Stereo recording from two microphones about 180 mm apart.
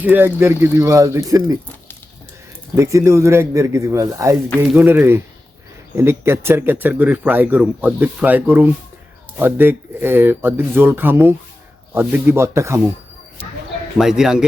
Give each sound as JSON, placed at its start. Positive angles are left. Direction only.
{"t": 0.0, "sound": "speech", "side_deg": -10}
{"t": 2.7, "sound": "speech", "side_deg": -15}
{"t": 14.0, "sound": "speech", "side_deg": -5}